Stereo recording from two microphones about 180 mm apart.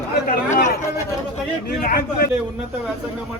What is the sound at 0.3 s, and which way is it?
Chatter, 45° left (ahead or behind).